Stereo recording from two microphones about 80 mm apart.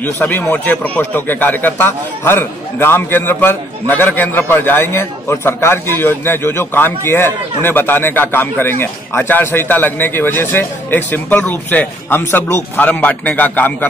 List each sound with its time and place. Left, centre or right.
0.0 s speech: left
12.7 s speech: left